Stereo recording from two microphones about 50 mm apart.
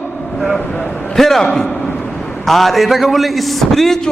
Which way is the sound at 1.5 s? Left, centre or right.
Left.